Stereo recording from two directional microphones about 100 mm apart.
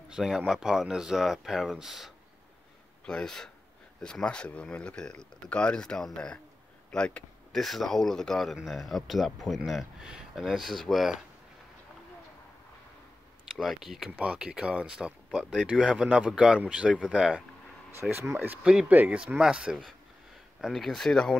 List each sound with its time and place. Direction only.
0.1 s speech: 5° right (ahead or behind)
3.1 s speech: 5° left (ahead or behind)
13.6 s speech: 5° right (ahead or behind)
18.3 s speech: 20° right (ahead or behind)
18.6 s speech: 10° right (ahead or behind)
20.7 s speech: 5° left (ahead or behind)